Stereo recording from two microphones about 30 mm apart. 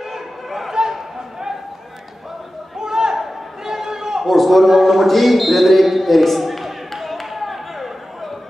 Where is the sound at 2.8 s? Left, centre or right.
Centre.